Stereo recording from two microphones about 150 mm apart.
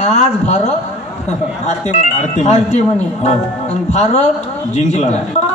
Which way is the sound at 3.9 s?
50° left (ahead or behind).